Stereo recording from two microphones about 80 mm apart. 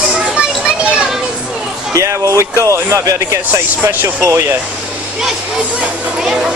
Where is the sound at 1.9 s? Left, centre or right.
Right.